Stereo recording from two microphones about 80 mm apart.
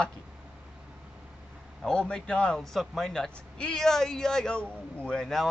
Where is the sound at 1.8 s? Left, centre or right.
Centre.